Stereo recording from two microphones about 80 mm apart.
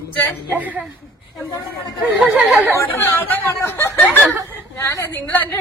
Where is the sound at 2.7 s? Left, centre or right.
Left.